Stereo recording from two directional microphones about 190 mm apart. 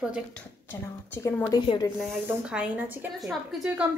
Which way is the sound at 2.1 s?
10° right (ahead or behind).